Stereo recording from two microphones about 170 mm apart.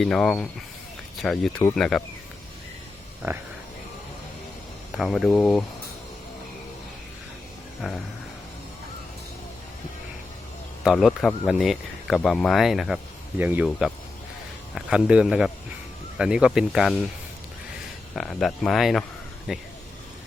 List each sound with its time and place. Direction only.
0.0 s speech: 5° left (ahead or behind)
4.9 s speech: centre (ahead or behind)
7.8 s speech: centre (ahead or behind)
10.8 s speech: centre (ahead or behind)
18.1 s speech: centre (ahead or behind)